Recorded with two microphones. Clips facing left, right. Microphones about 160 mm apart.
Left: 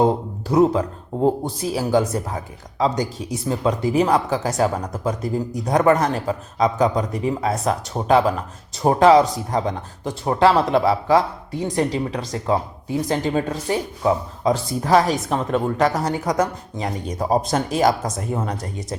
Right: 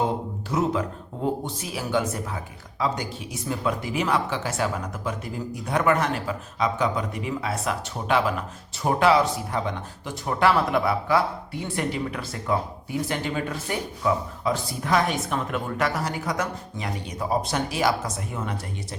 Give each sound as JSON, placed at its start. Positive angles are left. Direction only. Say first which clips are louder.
{"t": 0.0, "sound": "speech", "louder": "left 7 dB", "side_deg": 35}